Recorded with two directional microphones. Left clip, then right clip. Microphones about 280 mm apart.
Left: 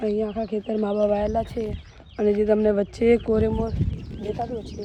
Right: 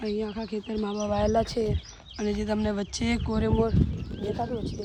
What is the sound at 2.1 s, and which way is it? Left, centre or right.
Speech, centre.